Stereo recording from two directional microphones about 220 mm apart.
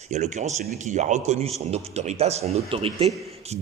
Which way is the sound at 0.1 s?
30° right (ahead or behind).